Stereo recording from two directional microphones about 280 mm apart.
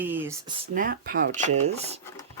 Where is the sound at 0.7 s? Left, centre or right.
Right.